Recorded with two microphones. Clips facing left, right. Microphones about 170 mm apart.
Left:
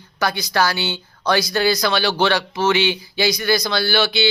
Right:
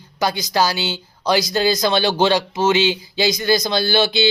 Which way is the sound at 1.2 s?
20° right (ahead or behind).